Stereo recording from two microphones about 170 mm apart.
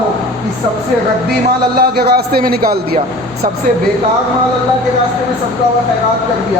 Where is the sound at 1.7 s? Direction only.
65° right (ahead or behind).